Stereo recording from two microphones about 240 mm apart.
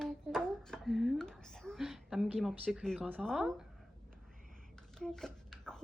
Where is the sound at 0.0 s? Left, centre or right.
Centre.